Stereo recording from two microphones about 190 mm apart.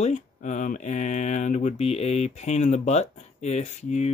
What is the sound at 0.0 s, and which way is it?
Speech, 40° left (ahead or behind).